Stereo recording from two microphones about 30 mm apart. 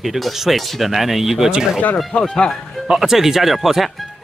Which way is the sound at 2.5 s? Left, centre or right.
Centre.